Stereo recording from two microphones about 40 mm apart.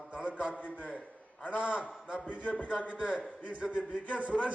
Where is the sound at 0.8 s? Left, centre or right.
Left.